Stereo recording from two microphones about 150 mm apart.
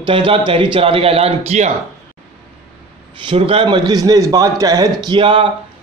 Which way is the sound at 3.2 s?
40° right (ahead or behind).